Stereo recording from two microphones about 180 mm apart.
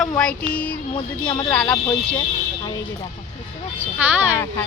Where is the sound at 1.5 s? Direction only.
5° left (ahead or behind).